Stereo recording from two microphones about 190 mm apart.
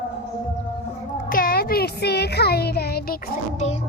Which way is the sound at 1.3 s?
50° left (ahead or behind).